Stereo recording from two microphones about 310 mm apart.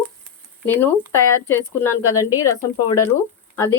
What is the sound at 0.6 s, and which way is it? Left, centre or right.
A woman's voice, centre.